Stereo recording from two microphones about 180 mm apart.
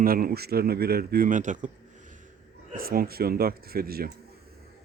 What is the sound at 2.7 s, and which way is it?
Speech, 55° right (ahead or behind).